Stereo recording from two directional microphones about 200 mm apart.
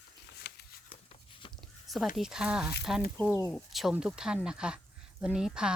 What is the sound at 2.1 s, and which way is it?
Speech, 5° right (ahead or behind).